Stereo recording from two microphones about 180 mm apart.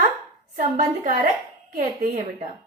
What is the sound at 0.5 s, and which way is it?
A woman's voice, 45° right (ahead or behind).